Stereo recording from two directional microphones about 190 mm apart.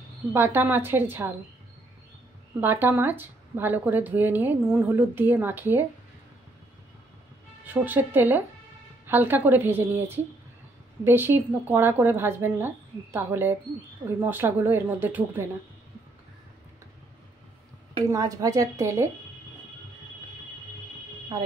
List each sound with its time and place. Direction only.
0.3 s speech: 10° right (ahead or behind)
2.6 s speech: 10° right (ahead or behind)
7.6 s speech: 10° right (ahead or behind)
18.1 s speech: 20° right (ahead or behind)